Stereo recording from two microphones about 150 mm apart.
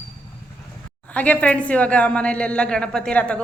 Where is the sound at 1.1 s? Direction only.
10° left (ahead or behind).